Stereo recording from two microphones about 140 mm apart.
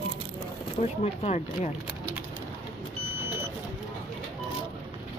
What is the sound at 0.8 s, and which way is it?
Speech, 50° left (ahead or behind).